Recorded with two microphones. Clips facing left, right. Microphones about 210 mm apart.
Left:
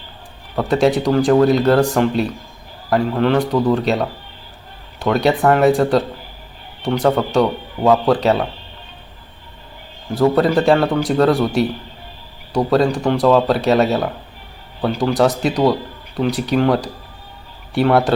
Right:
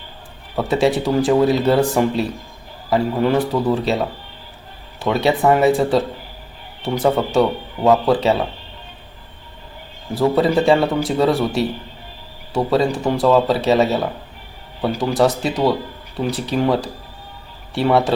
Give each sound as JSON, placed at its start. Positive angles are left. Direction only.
{"t": 0.5, "sound": "a man's voice", "side_deg": -5}
{"t": 10.2, "sound": "speech", "side_deg": 0}